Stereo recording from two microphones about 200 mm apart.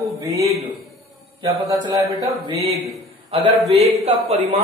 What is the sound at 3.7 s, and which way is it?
Speech, 30° right (ahead or behind).